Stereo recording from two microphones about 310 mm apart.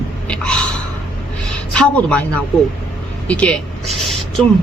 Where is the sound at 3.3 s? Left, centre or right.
Centre.